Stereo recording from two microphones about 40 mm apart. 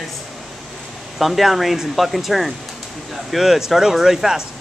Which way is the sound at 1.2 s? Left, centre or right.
Centre.